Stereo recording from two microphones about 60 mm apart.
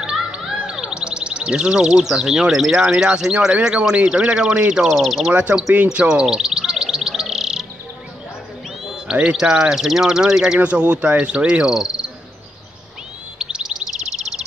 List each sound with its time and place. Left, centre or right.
0.0 s music: centre
0.5 s speech: centre
4.9 s speech: centre
5.9 s chirp: centre
8.8 s speech: centre
10.6 s speech: centre
13.4 s chirp: centre